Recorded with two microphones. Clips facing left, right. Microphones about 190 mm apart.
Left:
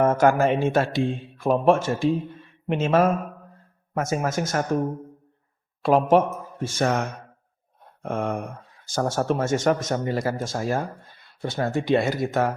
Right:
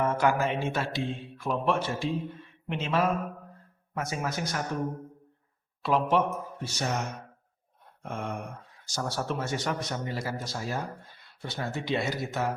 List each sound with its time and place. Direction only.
0.0 s speech: 45° left (ahead or behind)
5.8 s speech: 45° left (ahead or behind)
8.0 s a sound: 65° left (ahead or behind)
8.9 s speech: 50° left (ahead or behind)